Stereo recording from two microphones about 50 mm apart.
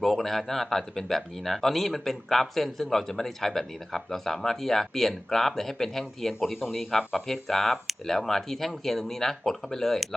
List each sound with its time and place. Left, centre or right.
0.0 s speech: centre